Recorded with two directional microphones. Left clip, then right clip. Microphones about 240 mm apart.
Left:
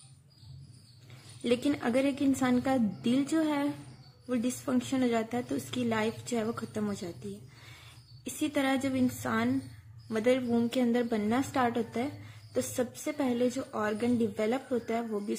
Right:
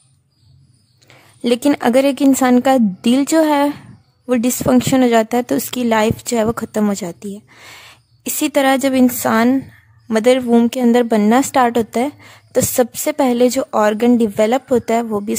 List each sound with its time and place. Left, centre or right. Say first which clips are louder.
1.0 s a woman's voice: right 13 dB; right
8.2 s a woman's voice: right 16 dB; right